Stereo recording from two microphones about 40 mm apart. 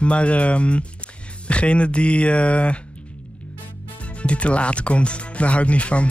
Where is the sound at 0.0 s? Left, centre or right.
Left.